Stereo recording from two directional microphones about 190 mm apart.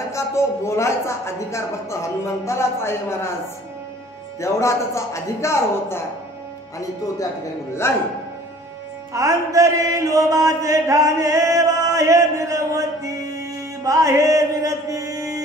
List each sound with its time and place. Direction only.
0.1 s speech: 15° left (ahead or behind)
4.4 s speech: 15° left (ahead or behind)
7.8 s speech: 15° left (ahead or behind)
9.1 s mantra: 15° right (ahead or behind)